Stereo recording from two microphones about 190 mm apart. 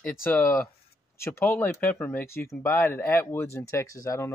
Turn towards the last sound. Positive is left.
turn(degrees=15)  # may be behind; listen again after turning